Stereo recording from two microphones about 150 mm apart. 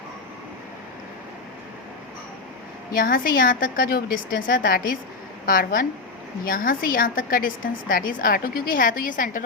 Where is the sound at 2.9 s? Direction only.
70° left (ahead or behind).